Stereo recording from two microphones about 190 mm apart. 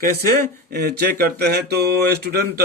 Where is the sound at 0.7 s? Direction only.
55° right (ahead or behind).